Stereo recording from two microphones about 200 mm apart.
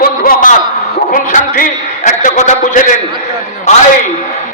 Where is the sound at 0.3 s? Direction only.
40° left (ahead or behind).